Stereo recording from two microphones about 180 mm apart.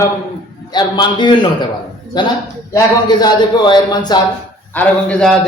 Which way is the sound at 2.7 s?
20° left (ahead or behind).